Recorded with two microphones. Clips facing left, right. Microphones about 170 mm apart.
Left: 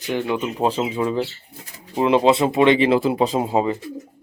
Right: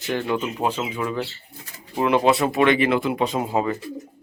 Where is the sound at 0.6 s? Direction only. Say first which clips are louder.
Left 4 dB; 30° left (ahead or behind).